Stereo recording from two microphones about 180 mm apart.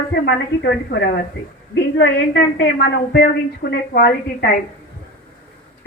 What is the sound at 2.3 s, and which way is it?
A woman's voice, 70° left (ahead or behind).